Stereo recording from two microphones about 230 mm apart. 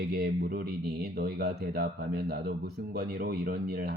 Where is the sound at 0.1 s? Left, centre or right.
Right.